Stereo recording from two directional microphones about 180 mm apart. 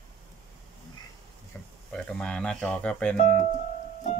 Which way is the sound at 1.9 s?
5° left (ahead or behind).